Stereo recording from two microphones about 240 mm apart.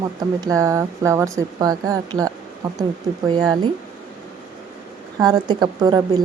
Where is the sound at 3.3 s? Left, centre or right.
Centre.